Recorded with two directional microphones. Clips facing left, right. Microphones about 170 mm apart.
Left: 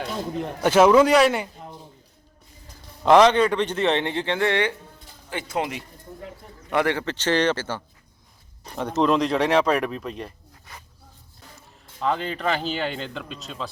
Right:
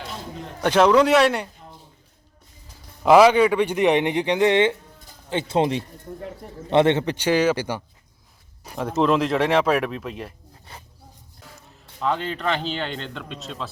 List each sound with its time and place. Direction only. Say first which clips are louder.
0.6 s speech: left 1 dB; 5° left (ahead or behind)
3.0 s a man's voice: right 2 dB; 10° right (ahead or behind)
11.9 s speech: even; centre (ahead or behind)